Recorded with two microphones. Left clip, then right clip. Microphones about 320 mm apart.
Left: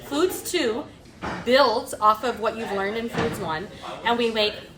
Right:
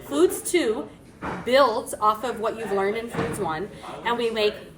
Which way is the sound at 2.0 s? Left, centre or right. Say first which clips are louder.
Left 3 dB; left.